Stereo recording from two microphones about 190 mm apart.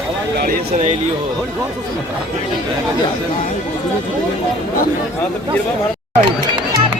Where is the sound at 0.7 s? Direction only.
35° right (ahead or behind).